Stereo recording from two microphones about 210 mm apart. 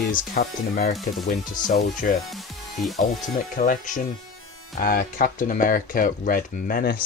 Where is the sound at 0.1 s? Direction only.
45° left (ahead or behind).